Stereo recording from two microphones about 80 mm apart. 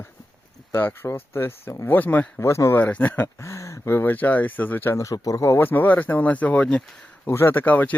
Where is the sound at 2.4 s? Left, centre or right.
Left.